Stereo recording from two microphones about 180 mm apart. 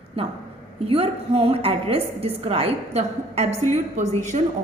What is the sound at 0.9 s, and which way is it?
A woman's voice, 30° right (ahead or behind).